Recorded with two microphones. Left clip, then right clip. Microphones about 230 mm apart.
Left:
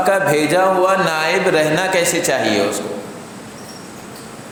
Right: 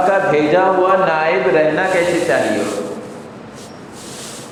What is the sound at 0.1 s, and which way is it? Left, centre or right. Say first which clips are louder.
A man's voice: right 1 dB; left.